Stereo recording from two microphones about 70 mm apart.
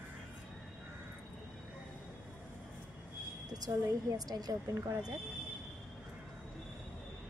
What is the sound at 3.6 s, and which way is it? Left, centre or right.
Speech, right.